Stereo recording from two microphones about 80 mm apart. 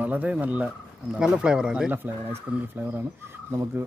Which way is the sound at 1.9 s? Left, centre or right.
Right.